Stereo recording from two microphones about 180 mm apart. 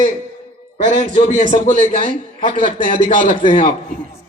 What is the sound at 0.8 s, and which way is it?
A man's voice, 45° right (ahead or behind).